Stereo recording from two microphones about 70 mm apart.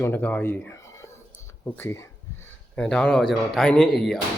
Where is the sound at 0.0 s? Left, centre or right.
Left.